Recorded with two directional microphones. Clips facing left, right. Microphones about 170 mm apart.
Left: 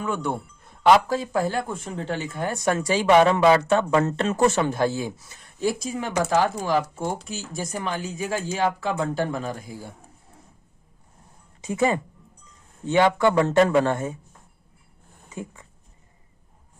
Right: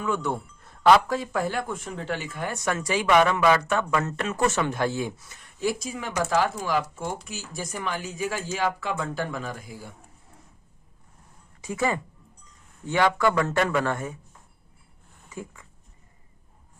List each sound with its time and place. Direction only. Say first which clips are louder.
0.8 s speech: left 1 dB; 25° left (ahead or behind)
11.6 s speech: left 4 dB; 25° left (ahead or behind)
15.3 s speech: left 2 dB; 20° left (ahead or behind)